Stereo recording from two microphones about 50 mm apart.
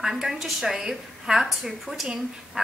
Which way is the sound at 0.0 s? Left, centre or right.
Centre.